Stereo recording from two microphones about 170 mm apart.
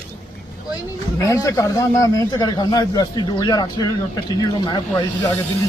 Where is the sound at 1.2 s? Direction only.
20° left (ahead or behind).